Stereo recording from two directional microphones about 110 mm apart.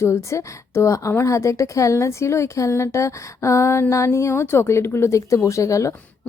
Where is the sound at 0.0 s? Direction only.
25° left (ahead or behind).